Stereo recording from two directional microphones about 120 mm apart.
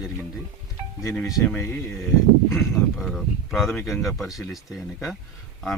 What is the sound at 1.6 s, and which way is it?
Speech, 20° left (ahead or behind).